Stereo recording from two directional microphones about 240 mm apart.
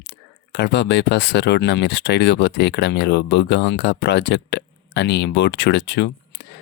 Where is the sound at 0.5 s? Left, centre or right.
Left.